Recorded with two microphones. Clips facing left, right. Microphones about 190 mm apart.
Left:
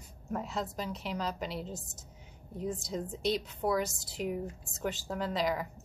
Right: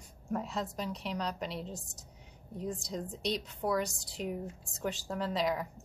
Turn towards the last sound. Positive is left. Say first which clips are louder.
# even
turn(degrees=0)  # may be behind; listen again after turning